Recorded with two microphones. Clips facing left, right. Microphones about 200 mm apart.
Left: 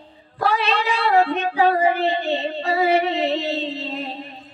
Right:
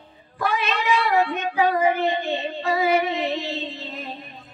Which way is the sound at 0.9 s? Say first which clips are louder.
Left 3 dB; 60° left (ahead or behind).